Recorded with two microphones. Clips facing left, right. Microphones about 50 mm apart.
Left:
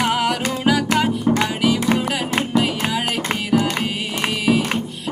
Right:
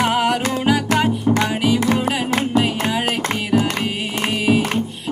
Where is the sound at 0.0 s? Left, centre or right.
Right.